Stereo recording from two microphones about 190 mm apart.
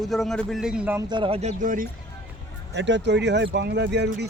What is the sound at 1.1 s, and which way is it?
Speech, 30° right (ahead or behind).